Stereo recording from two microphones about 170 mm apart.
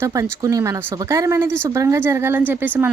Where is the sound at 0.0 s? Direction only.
20° right (ahead or behind).